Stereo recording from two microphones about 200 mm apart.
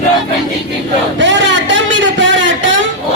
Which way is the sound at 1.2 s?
65° right (ahead or behind).